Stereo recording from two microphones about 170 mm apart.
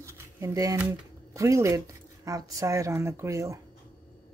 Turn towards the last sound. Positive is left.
turn(degrees=-20)  # may be behind; listen again after turning